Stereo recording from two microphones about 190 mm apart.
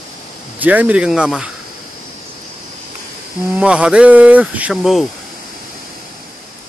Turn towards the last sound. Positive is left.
turn(degrees=0)  # may be behind; listen again after turning